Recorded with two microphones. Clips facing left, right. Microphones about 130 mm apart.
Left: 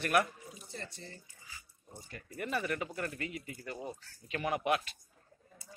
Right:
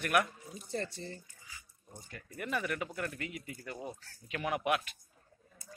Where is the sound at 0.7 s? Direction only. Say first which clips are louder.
Right 10 dB; 40° right (ahead or behind).